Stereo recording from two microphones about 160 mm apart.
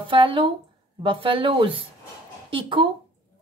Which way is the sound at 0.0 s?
30° right (ahead or behind).